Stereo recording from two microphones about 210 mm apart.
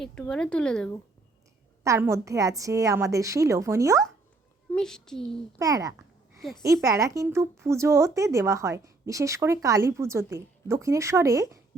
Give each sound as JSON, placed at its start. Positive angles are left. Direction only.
{"t": 0.0, "sound": "speech", "side_deg": 5}
{"t": 1.8, "sound": "speech", "side_deg": -15}
{"t": 4.7, "sound": "speech", "side_deg": 5}
{"t": 5.5, "sound": "speech", "side_deg": -15}